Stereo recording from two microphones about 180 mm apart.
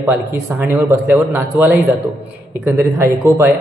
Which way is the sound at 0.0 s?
15° right (ahead or behind).